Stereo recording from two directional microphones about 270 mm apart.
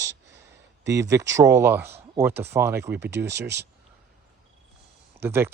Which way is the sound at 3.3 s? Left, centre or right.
Right.